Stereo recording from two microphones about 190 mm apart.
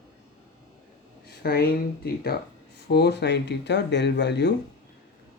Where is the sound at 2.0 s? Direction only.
55° left (ahead or behind).